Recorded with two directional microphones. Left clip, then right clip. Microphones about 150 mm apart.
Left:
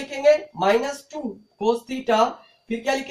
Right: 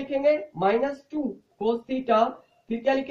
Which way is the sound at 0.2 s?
15° right (ahead or behind).